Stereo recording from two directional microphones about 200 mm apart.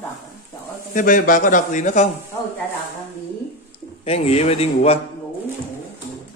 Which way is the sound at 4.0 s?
30° left (ahead or behind).